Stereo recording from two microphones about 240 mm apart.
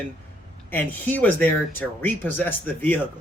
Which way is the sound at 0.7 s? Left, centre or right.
Centre.